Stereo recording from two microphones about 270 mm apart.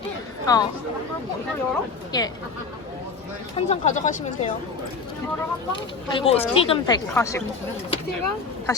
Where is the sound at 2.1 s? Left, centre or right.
Centre.